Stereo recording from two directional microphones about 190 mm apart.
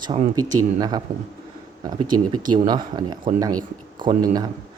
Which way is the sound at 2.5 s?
20° right (ahead or behind).